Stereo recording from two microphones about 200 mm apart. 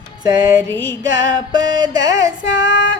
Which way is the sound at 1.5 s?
20° right (ahead or behind).